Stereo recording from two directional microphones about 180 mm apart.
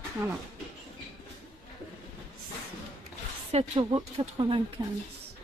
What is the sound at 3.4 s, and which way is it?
Speech, 35° right (ahead or behind).